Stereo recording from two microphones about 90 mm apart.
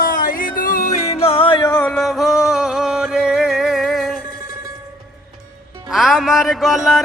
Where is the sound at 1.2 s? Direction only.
90° left.